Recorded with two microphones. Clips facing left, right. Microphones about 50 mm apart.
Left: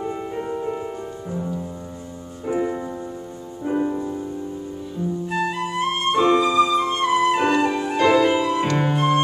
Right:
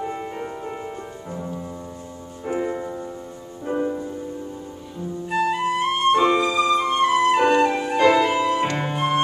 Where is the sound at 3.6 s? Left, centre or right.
Centre.